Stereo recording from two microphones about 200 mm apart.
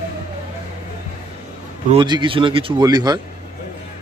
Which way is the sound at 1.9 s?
20° right (ahead or behind).